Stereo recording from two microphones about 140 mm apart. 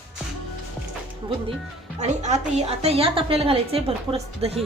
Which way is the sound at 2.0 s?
55° right (ahead or behind).